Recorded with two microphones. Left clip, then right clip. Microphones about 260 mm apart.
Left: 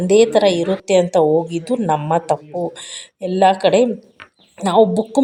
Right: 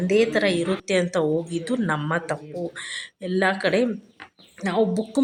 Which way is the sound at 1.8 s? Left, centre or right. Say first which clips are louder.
Left 10 dB; left.